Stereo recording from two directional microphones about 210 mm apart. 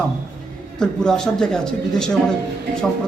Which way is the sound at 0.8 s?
5° left (ahead or behind).